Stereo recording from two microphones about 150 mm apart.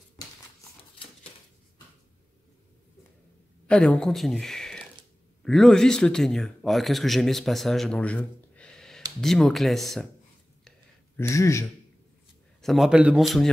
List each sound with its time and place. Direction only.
3.6 s speech: 5° left (ahead or behind)
11.1 s speech: 20° left (ahead or behind)
12.6 s speech: centre (ahead or behind)